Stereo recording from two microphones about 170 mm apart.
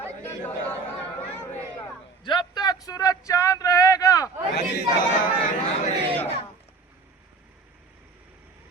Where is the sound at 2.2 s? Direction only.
25° left (ahead or behind).